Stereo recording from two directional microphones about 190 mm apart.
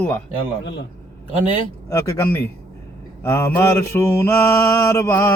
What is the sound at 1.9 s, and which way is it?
Mantra, 15° left (ahead or behind).